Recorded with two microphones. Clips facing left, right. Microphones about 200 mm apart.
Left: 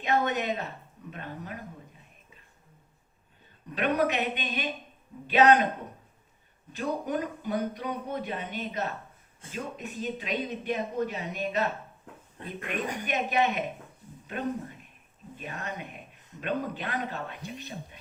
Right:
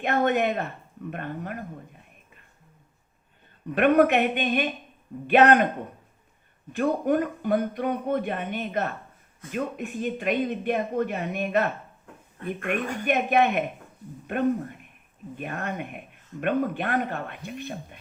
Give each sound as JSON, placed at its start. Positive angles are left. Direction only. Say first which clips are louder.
{"t": 0.0, "sound": "speech", "louder": "right 5 dB", "side_deg": -55}
{"t": 3.8, "sound": "speech", "louder": "right 8 dB", "side_deg": -55}
{"t": 6.7, "sound": "speech", "louder": "right 7 dB", "side_deg": -55}
{"t": 12.4, "sound": "speech", "louder": "right 5 dB", "side_deg": 20}
{"t": 13.1, "sound": "speech", "louder": "right 6 dB", "side_deg": -55}